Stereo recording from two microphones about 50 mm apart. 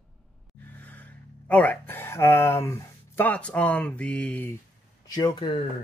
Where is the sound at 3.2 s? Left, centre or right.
Left.